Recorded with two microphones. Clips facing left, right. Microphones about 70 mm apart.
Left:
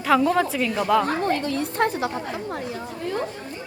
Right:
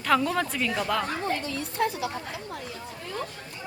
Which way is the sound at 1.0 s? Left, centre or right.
Left.